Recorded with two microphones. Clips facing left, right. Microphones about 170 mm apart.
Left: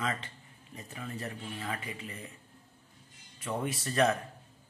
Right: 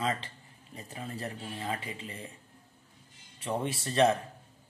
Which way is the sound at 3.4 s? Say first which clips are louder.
Right 2 dB; 30° right (ahead or behind).